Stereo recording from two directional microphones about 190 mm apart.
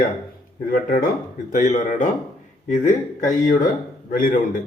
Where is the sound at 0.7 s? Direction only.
45° left (ahead or behind).